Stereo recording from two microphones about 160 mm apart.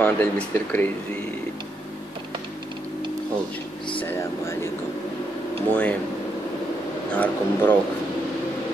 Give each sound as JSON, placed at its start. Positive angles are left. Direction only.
{"t": 0.0, "sound": "speech", "side_deg": 10}
{"t": 4.0, "sound": "speech", "side_deg": 15}
{"t": 5.7, "sound": "speech", "side_deg": 10}
{"t": 7.1, "sound": "speech", "side_deg": 10}